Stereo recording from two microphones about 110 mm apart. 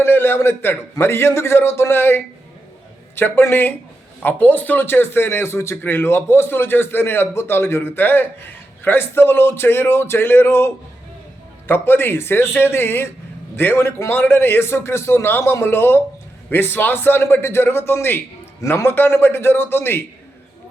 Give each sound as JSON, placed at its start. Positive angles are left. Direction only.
{"t": 0.0, "sound": "a man's voice", "side_deg": 20}
{"t": 11.7, "sound": "a man's voice", "side_deg": 20}